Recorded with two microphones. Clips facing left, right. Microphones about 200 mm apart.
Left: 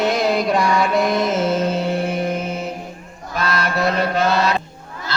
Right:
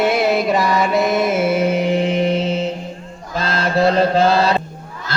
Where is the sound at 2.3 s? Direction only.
90° right.